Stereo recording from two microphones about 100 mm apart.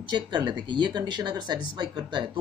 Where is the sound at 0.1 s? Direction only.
50° right (ahead or behind).